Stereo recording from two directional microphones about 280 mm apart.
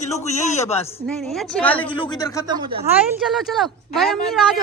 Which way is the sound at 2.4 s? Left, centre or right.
Centre.